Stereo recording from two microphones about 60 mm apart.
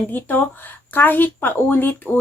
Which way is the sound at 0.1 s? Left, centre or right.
Left.